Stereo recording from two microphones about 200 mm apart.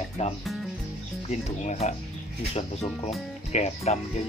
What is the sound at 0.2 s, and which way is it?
Speech, 35° left (ahead or behind).